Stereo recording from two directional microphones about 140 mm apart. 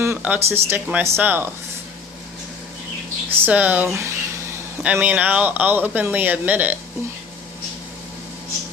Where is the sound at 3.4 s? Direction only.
10° right (ahead or behind).